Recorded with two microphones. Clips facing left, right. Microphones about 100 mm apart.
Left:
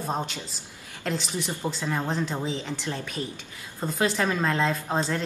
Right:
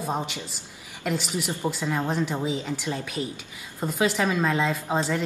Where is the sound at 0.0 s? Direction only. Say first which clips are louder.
Right 1 dB; 5° right (ahead or behind).